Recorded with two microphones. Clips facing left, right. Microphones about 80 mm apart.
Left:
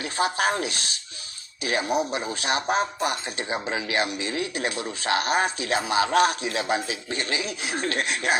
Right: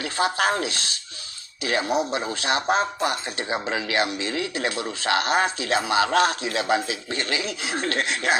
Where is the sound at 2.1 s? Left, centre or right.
Right.